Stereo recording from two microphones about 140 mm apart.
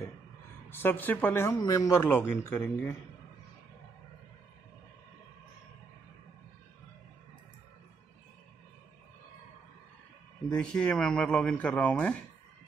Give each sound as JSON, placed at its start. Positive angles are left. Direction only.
{"t": 0.7, "sound": "speech", "side_deg": 15}
{"t": 2.0, "sound": "speech", "side_deg": 15}
{"t": 10.5, "sound": "speech", "side_deg": 5}